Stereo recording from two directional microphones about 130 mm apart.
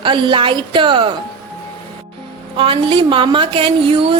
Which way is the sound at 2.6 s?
40° right (ahead or behind).